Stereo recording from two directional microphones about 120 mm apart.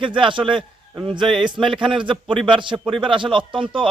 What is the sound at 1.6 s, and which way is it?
Speech, centre (ahead or behind).